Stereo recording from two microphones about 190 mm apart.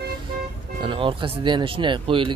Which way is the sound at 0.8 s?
25° right (ahead or behind).